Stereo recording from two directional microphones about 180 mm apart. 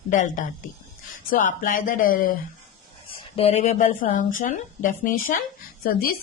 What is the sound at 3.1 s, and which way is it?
Speech, 35° left (ahead or behind).